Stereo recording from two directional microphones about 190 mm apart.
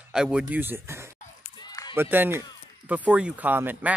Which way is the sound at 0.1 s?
5° right (ahead or behind).